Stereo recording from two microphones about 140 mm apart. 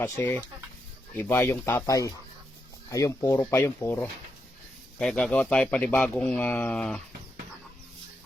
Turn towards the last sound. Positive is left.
turn(degrees=5)  # may be behind; listen again after turning